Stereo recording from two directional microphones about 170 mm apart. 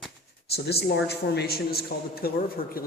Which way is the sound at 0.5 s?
70° left (ahead or behind).